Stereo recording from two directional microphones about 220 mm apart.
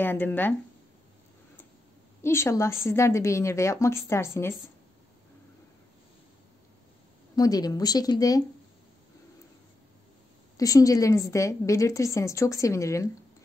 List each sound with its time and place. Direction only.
0.0 s a woman's voice: 10° left (ahead or behind)
2.2 s a woman's voice: 10° left (ahead or behind)
7.3 s a woman's voice: 15° left (ahead or behind)
10.6 s a woman's voice: 15° left (ahead or behind)